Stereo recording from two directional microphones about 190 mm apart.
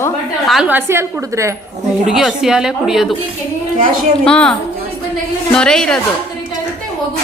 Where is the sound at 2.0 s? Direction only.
Centre (ahead or behind).